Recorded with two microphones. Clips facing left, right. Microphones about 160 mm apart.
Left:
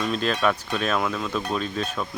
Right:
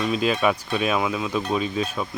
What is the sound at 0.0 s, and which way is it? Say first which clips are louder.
Speech: right 2 dB; 5° right (ahead or behind).